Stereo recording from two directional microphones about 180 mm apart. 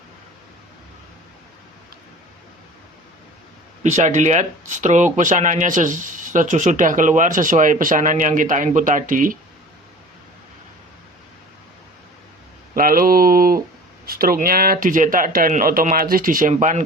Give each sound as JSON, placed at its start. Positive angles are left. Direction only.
{"t": 3.8, "sound": "speech", "side_deg": -40}
{"t": 12.7, "sound": "a sound", "side_deg": -50}
{"t": 14.0, "sound": "speech", "side_deg": -55}